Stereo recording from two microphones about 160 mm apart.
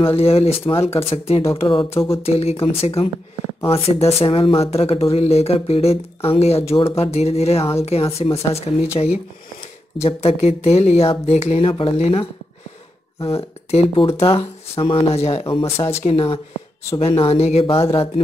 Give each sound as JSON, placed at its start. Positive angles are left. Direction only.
{"t": 0.0, "sound": "speech", "side_deg": 40}
{"t": 9.9, "sound": "speech", "side_deg": 40}